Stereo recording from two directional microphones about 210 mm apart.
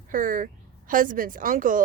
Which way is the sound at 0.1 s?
40° right (ahead or behind).